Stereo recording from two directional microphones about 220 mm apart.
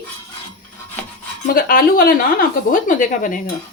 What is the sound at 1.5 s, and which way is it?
Speech, 40° left (ahead or behind).